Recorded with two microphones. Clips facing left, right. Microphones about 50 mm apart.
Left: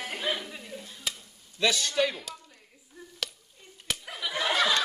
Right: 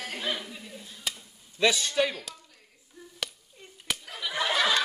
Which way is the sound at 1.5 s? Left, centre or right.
Centre.